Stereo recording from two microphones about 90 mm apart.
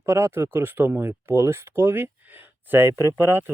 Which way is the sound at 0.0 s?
30° right (ahead or behind).